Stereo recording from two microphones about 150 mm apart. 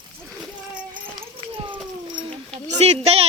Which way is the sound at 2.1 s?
35° right (ahead or behind).